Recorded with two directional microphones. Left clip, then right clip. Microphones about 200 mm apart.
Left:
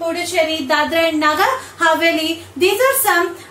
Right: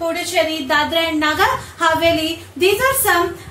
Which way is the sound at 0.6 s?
15° left (ahead or behind).